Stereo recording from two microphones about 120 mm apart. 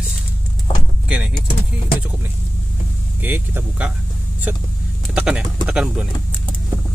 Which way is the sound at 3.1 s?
15° right (ahead or behind).